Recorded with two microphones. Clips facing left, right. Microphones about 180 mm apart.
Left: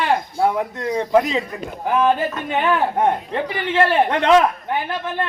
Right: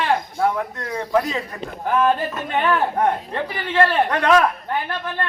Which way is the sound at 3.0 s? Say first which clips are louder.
Left 2 dB; 20° left (ahead or behind).